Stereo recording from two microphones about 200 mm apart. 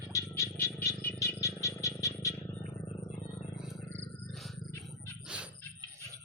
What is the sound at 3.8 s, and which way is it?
Wild animals, 10° left (ahead or behind).